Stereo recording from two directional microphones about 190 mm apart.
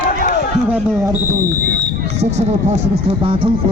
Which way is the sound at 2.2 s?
35° right (ahead or behind).